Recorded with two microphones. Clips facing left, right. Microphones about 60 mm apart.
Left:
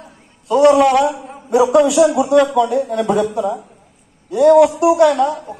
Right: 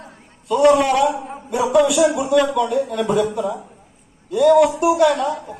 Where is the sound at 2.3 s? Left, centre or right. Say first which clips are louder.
Left 4 dB; left.